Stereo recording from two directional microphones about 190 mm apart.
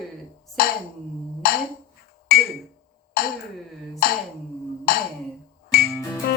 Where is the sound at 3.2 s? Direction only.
50° left (ahead or behind).